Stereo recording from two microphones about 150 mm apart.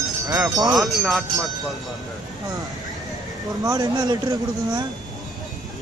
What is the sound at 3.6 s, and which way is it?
Speech, 25° right (ahead or behind).